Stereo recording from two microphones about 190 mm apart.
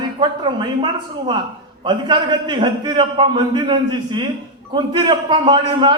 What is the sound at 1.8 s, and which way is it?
A man's voice, 25° right (ahead or behind).